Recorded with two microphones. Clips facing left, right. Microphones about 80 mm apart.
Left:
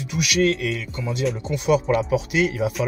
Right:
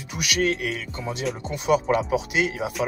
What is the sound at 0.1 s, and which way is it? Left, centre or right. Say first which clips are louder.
Speech: left 4 dB; right.